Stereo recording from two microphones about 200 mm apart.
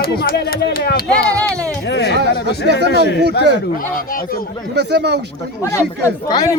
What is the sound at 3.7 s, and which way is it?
Speech, 45° left (ahead or behind).